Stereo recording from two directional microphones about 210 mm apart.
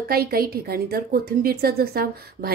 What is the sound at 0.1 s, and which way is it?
A woman's voice, 45° right (ahead or behind).